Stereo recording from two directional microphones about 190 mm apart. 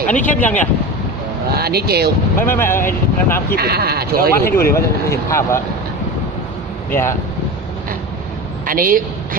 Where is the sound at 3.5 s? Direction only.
55° right (ahead or behind).